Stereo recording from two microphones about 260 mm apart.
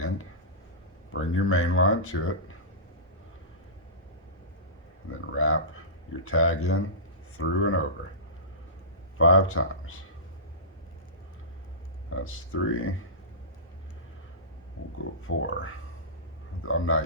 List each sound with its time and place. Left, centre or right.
1.1 s speech: left
5.2 s a sound: left
6.2 s speech: left
9.1 s speech: left
12.1 s speech: left
15.3 s speech: left